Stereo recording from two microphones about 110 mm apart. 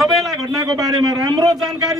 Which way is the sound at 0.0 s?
Centre (ahead or behind).